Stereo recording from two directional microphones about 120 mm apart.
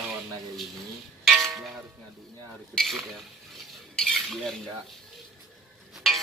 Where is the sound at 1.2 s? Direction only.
Centre (ahead or behind).